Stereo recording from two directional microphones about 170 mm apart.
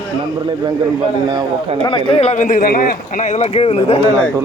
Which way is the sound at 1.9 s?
30° left (ahead or behind).